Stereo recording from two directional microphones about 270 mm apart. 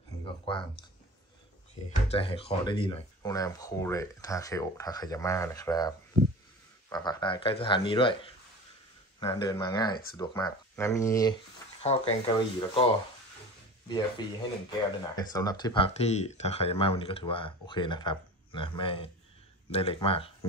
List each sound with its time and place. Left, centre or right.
0.2 s a sound: centre
1.9 s speech: left
11.8 s speech: left
13.8 s speech: centre